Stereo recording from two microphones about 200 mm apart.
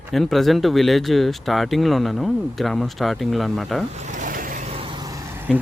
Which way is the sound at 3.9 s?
35° right (ahead or behind).